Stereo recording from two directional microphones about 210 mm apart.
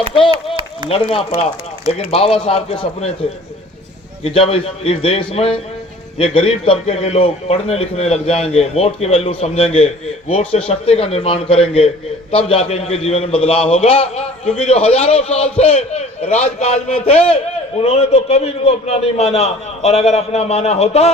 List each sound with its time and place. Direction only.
0.3 s a sound: 25° right (ahead or behind)
1.1 s a man's voice: 25° left (ahead or behind)
4.2 s a man's voice: 25° left (ahead or behind)